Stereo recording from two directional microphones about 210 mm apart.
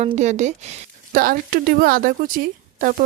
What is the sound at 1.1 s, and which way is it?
A woman's voice, 45° right (ahead or behind).